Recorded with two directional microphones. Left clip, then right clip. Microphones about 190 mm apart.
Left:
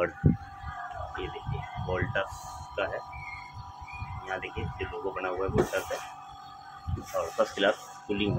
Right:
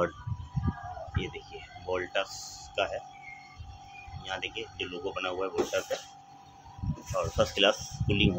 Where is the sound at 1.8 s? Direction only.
20° right (ahead or behind).